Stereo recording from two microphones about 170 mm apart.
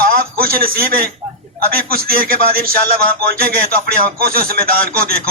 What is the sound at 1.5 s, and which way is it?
A man's voice, 60° right (ahead or behind).